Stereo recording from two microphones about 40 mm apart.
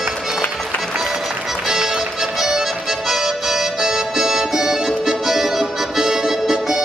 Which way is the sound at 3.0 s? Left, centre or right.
Centre.